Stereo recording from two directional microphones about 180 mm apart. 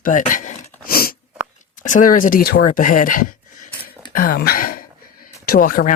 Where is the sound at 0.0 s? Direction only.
45° left (ahead or behind).